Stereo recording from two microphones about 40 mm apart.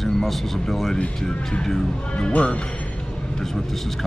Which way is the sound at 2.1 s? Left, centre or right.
Left.